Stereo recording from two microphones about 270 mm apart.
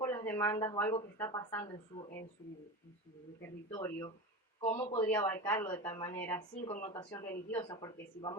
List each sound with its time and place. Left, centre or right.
0.0 s a woman's voice: centre
3.7 s a woman's voice: centre